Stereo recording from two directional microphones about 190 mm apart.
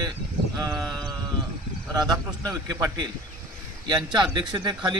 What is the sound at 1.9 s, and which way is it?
A man's voice, 20° right (ahead or behind).